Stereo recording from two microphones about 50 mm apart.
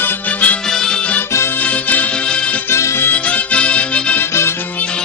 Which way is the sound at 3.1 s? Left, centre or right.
Left.